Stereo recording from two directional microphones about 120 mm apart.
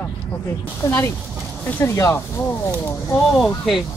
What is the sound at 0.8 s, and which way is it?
Speech, 25° left (ahead or behind).